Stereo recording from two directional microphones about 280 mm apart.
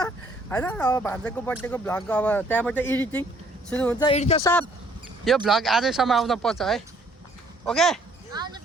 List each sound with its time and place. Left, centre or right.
0.5 s speech: centre
4.0 s speech: left
5.5 s speech: centre
8.3 s a sound: centre